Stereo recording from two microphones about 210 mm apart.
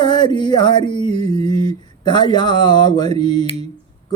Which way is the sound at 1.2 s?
20° left (ahead or behind).